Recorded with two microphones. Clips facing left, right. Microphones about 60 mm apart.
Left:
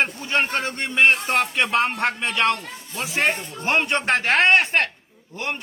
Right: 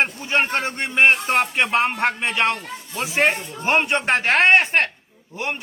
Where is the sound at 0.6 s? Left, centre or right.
Right.